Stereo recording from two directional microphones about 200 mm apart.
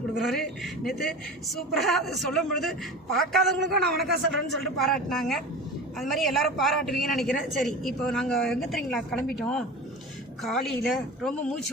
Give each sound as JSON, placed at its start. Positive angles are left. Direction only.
{"t": 0.2, "sound": "a woman's voice", "side_deg": 0}
{"t": 3.6, "sound": "a man's voice", "side_deg": -55}
{"t": 4.0, "sound": "a woman's voice", "side_deg": 0}